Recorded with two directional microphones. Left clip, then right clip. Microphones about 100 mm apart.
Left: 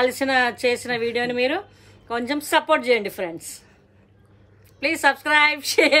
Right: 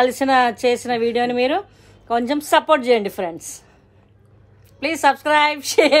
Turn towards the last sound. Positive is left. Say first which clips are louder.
# right 3 dB
turn(degrees=-25)  # may be behind; listen again after turning